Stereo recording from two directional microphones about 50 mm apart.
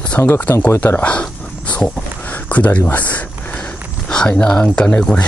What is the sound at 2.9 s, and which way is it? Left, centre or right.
Speech, left.